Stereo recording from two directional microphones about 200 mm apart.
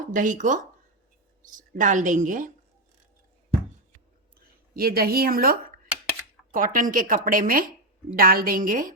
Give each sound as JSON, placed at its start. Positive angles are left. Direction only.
{"t": 0.1, "sound": "a woman's voice", "side_deg": -40}
{"t": 4.4, "sound": "speech", "side_deg": -50}